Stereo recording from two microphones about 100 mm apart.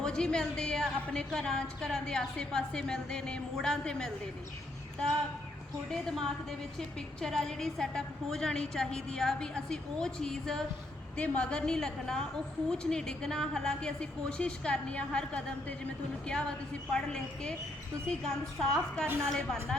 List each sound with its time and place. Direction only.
0.0 s a woman's voice: 10° left (ahead or behind)
5.9 s a woman's voice: 5° left (ahead or behind)
19.0 s a woman's voice: 25° right (ahead or behind)
19.3 s a woman's voice: 5° left (ahead or behind)